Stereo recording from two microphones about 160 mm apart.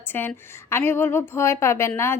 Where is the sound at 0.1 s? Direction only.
15° left (ahead or behind).